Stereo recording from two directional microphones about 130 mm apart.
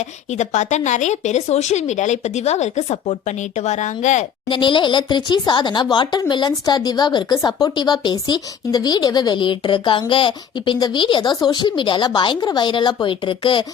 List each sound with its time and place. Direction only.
0.0 s speech: 60° left (ahead or behind)
4.4 s speech: 40° left (ahead or behind)